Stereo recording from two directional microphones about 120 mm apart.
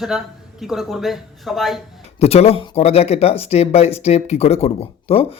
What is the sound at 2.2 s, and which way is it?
Speech, 60° left (ahead or behind).